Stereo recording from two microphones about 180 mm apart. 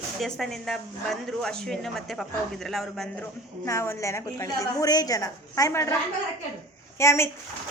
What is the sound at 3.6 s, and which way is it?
A woman's voice, 15° left (ahead or behind).